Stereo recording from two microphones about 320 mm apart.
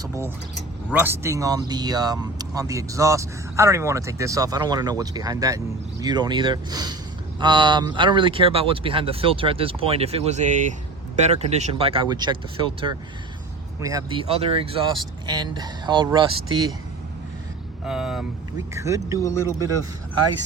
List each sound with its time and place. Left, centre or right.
0.0 s speech: centre
17.8 s speech: centre
19.2 s speech: centre